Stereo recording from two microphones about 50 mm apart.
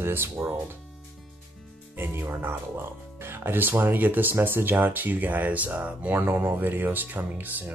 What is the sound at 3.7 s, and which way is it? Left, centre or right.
Speech, right.